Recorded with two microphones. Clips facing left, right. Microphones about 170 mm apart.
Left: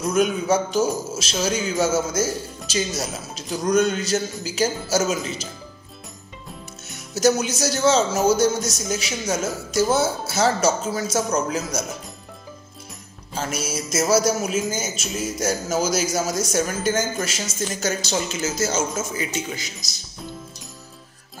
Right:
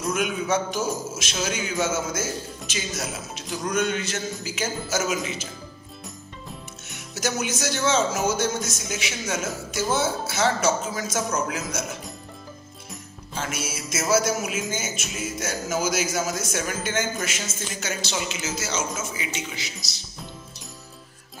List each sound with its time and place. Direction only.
0.1 s a man's voice: 35° left (ahead or behind)
7.2 s a man's voice: 35° left (ahead or behind)
13.4 s a man's voice: 40° left (ahead or behind)